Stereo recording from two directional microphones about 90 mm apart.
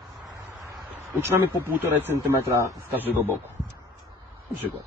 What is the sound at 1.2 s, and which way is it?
Speech, 25° right (ahead or behind).